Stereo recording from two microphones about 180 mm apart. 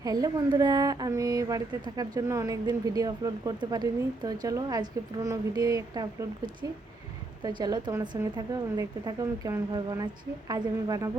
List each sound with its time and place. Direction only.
0.0 s speech: 20° right (ahead or behind)